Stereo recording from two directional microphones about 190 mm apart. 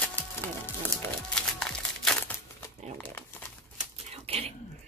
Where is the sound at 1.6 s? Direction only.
5° left (ahead or behind).